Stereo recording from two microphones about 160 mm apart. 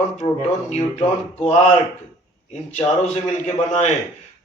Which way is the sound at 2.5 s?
45° left (ahead or behind).